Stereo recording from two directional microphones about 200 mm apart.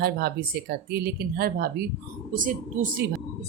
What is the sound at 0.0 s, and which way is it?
A woman's voice, 50° right (ahead or behind).